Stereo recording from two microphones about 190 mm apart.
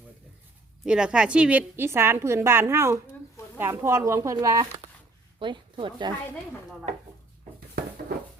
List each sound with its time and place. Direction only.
0.9 s a woman's voice: 5° right (ahead or behind); by 6.1 s 25° right (ahead or behind)